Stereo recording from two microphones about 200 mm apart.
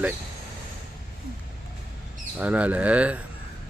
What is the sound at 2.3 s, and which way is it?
Speech, 5° right (ahead or behind).